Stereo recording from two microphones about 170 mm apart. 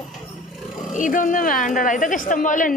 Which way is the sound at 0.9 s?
50° left (ahead or behind).